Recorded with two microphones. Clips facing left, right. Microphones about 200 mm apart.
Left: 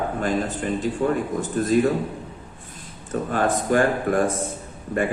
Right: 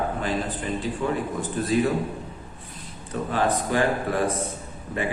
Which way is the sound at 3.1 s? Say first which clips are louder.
Left 2 dB; 45° left (ahead or behind).